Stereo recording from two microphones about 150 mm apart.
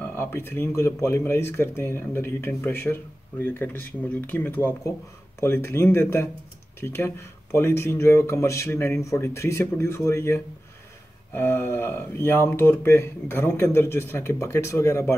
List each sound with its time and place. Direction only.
0.0 s speech: 15° left (ahead or behind)